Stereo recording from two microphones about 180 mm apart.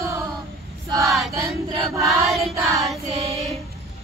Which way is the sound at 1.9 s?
Centre (ahead or behind).